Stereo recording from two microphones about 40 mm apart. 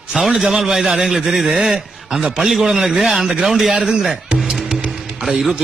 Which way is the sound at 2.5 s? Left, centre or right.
Centre.